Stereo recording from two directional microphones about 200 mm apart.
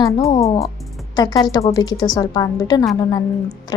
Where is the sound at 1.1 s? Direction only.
20° left (ahead or behind).